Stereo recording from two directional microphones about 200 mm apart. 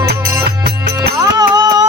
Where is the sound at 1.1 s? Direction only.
20° right (ahead or behind).